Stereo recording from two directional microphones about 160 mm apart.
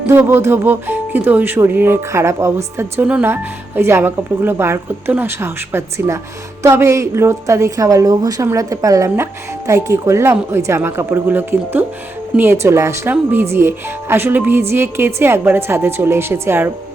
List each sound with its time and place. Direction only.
0.1 s speech: 15° right (ahead or behind)